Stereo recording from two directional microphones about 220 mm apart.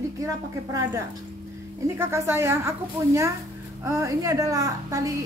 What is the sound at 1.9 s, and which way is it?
Speech, 10° right (ahead or behind).